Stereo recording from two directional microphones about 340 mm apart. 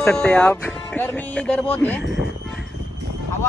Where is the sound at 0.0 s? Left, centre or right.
Centre.